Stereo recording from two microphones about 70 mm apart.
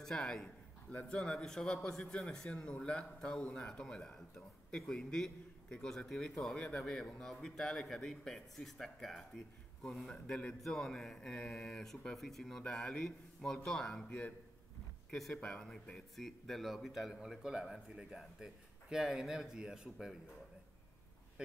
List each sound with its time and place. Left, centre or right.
0.0 s a sound: centre
1.0 s a man's voice: centre
14.0 s a man's voice: centre
15.0 s a man's voice: centre